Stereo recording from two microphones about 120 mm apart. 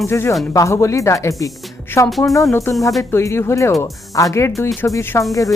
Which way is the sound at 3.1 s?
20° left (ahead or behind).